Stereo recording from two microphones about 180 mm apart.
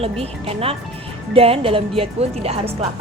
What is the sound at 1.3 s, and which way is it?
A woman's voice, 30° right (ahead or behind).